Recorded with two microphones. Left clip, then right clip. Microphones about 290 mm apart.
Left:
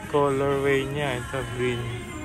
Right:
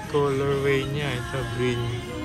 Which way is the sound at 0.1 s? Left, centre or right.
Centre.